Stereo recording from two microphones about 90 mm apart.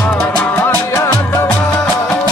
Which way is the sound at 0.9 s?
40° left (ahead or behind).